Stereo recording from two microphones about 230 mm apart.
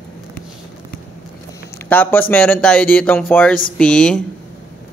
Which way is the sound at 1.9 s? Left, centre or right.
Centre.